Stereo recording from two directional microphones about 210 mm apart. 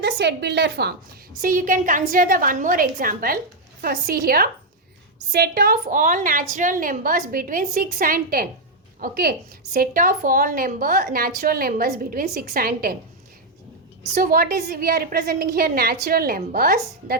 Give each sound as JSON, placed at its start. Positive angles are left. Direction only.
{"t": 0.0, "sound": "a woman's voice", "side_deg": -55}
{"t": 1.4, "sound": "a woman's voice", "side_deg": -40}
{"t": 14.2, "sound": "a woman's voice", "side_deg": -45}